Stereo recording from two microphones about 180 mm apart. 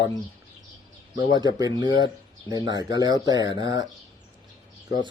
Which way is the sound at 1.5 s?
20° right (ahead or behind).